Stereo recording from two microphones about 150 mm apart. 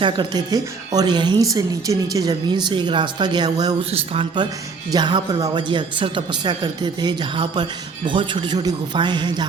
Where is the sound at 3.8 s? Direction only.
40° right (ahead or behind).